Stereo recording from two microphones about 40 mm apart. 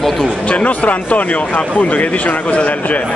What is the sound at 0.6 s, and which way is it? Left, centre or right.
Speech, left.